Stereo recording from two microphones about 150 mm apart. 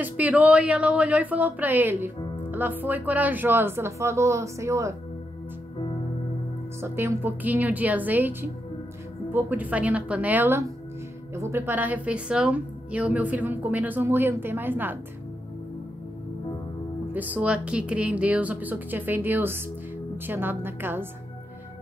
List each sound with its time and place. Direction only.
0.0 s a woman's voice: 10° right (ahead or behind)
6.8 s a woman's voice: 15° right (ahead or behind)
17.1 s a woman's voice: 10° right (ahead or behind)